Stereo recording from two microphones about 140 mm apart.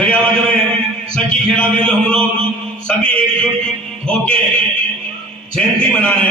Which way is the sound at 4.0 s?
10° left (ahead or behind).